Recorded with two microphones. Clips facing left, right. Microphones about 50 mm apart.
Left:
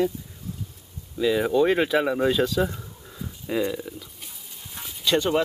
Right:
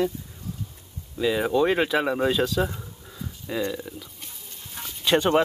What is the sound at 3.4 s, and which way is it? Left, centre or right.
Speech, centre.